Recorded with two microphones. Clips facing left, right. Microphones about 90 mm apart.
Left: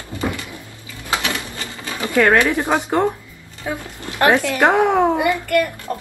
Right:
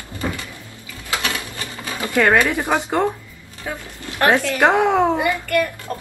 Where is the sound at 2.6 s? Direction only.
15° left (ahead or behind).